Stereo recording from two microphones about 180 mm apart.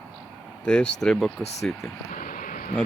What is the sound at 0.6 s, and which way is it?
Speech, 5° left (ahead or behind).